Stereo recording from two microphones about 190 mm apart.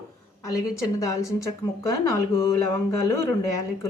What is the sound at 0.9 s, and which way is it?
Speech, 15° left (ahead or behind).